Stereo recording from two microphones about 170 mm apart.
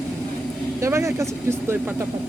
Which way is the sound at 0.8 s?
15° right (ahead or behind).